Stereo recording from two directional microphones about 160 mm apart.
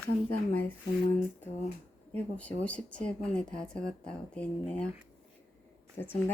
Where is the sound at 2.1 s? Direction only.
10° left (ahead or behind).